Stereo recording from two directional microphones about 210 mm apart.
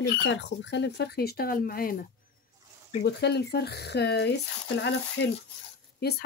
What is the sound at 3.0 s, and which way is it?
Speech, 55° left (ahead or behind).